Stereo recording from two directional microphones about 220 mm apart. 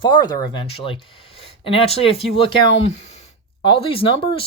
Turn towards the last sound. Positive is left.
turn(degrees=25)  # may be behind; listen again after turning